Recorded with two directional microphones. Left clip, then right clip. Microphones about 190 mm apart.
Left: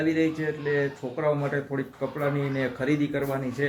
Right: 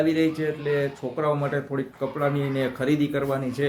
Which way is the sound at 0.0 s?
10° right (ahead or behind).